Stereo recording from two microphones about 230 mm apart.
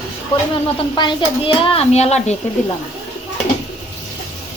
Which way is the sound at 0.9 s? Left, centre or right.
Left.